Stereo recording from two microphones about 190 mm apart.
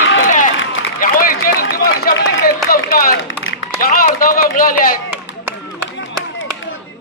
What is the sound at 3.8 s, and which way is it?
Run, 50° left (ahead or behind).